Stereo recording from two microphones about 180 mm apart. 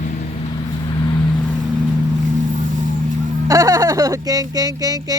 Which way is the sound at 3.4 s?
20° right (ahead or behind).